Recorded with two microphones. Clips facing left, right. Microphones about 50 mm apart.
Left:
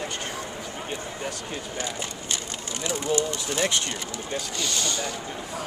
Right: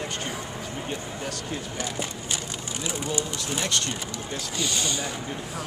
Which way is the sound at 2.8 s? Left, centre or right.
Centre.